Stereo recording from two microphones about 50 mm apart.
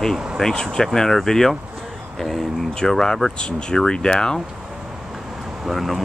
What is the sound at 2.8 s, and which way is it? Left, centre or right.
Speech, centre.